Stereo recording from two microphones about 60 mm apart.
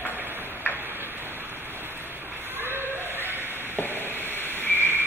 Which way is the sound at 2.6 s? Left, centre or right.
Right.